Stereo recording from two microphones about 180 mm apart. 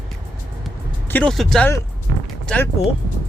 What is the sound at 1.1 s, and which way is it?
Speech, 5° left (ahead or behind).